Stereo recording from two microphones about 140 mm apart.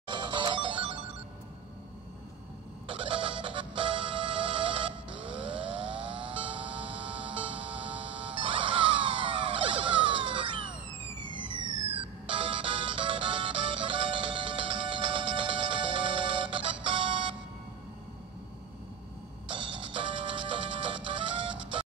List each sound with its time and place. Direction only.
0.1 s music: 35° right (ahead or behind)
2.9 s music: 40° right (ahead or behind)
11.9 s music: 40° right (ahead or behind)
19.4 s music: 35° right (ahead or behind)